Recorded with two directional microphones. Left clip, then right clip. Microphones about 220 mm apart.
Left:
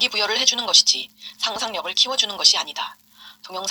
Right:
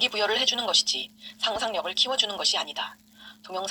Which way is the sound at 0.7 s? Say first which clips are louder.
Left 8 dB; 50° left (ahead or behind).